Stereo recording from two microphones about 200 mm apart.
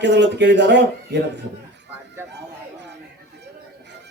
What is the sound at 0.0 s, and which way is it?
A man's voice, 60° right (ahead or behind).